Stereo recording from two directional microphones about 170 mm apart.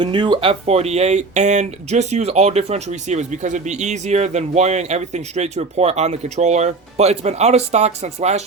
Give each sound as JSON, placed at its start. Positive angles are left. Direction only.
{"t": 0.0, "sound": "speech", "side_deg": -25}